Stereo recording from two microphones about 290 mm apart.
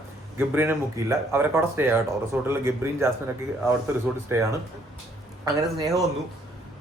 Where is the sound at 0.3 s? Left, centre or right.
Centre.